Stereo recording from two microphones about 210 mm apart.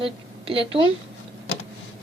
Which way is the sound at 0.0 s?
25° right (ahead or behind).